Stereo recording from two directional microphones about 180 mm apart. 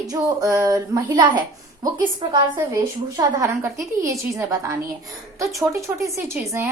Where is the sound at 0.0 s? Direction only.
20° right (ahead or behind).